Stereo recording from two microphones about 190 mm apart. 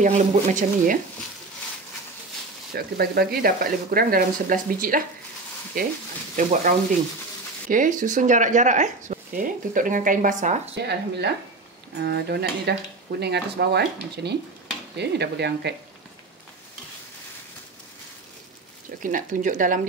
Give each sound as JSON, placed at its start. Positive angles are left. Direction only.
{"t": 0.0, "sound": "speech", "side_deg": -40}
{"t": 2.7, "sound": "speech", "side_deg": -55}
{"t": 7.7, "sound": "speech", "side_deg": -45}
{"t": 10.7, "sound": "speech", "side_deg": -60}
{"t": 19.0, "sound": "speech", "side_deg": -45}